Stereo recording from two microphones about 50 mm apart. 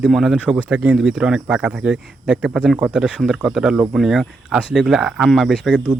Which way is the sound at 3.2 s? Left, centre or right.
Centre.